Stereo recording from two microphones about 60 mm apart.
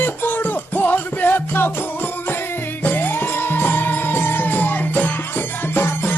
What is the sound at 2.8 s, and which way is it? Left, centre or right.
Music, left.